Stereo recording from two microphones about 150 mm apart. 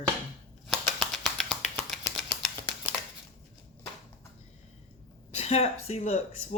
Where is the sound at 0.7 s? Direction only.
Centre (ahead or behind).